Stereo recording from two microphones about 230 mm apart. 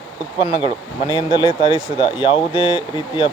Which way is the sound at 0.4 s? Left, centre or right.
Left.